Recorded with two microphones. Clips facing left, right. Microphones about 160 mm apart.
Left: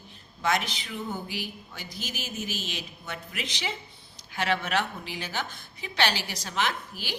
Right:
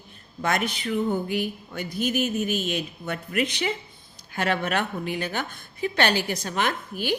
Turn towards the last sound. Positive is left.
turn(degrees=-55)  # may be behind; listen again after turning